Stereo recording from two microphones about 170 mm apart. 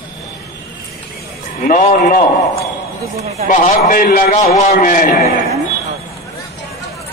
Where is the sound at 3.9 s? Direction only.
55° left (ahead or behind).